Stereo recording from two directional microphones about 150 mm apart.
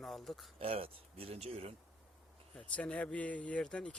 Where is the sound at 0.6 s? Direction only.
40° right (ahead or behind).